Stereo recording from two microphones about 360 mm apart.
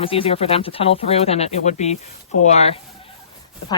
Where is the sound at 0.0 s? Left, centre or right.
Centre.